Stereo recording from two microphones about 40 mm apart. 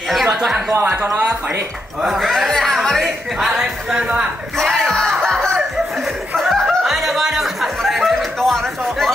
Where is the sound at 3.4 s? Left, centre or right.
Centre.